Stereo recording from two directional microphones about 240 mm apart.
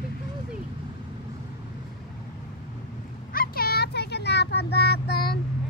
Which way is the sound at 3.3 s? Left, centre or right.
Left.